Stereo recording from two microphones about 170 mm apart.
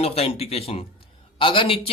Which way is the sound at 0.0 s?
35° left (ahead or behind).